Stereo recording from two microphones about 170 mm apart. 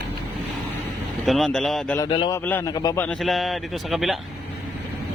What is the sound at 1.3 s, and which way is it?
Speech, centre (ahead or behind).